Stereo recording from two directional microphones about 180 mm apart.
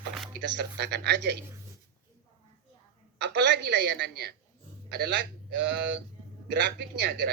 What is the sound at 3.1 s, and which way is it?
A man's voice, 75° right (ahead or behind).